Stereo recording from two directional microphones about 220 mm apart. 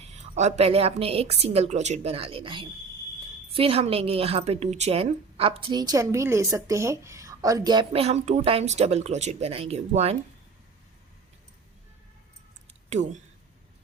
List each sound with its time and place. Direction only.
0.0 s a woman's voice: 30° right (ahead or behind)
12.9 s speech: 30° right (ahead or behind)